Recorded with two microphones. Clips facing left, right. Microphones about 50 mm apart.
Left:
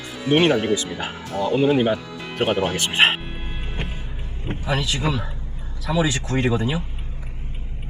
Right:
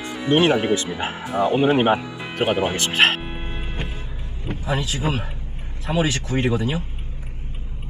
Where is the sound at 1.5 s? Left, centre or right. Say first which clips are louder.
Left 1 dB; right.